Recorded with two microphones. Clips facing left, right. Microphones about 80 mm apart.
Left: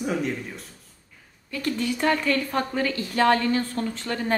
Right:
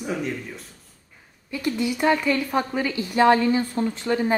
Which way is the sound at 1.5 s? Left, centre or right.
Centre.